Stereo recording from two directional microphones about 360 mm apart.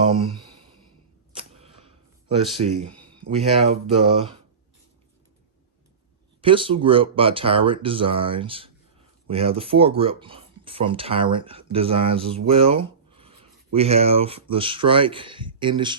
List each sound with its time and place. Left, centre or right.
1.4 s arrow: centre
2.6 s speech: centre
6.4 s speech: centre